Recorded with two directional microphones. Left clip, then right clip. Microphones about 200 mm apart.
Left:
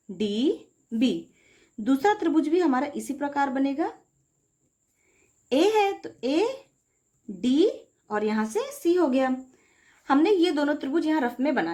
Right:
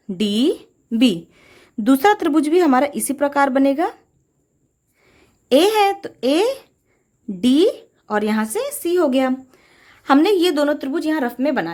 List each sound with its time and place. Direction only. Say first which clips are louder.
0.2 s a woman's voice: right 7 dB; 45° right (ahead or behind)
5.5 s a woman's voice: right 7 dB; 45° right (ahead or behind)